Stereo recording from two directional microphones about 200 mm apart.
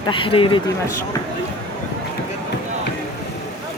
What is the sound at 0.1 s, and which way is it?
Speech, 25° left (ahead or behind).